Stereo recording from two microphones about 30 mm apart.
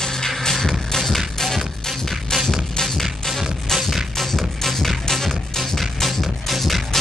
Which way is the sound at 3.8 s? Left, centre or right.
Centre.